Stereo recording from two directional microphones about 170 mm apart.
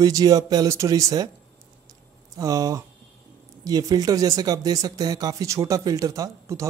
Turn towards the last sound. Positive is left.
turn(degrees=-20)  # may be behind; listen again after turning